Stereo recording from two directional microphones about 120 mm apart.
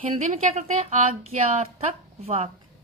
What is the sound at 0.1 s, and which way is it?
Speech, 65° right (ahead or behind).